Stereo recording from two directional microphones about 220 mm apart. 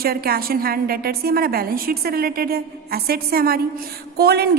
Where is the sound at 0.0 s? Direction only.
45° right (ahead or behind).